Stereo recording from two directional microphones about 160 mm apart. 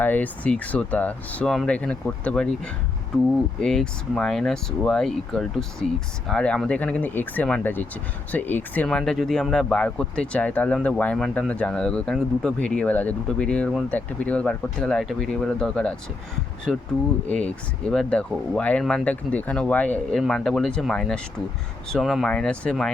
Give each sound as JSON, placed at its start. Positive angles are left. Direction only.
{"t": 0.0, "sound": "speech", "side_deg": 10}
{"t": 3.6, "sound": "speech", "side_deg": 5}
{"t": 17.2, "sound": "speech", "side_deg": 5}